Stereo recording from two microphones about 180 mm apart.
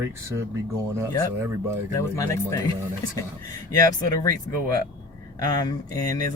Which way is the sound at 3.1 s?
20° left (ahead or behind).